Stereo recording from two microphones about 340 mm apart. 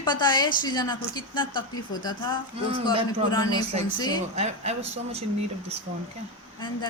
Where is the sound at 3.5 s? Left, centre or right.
Centre.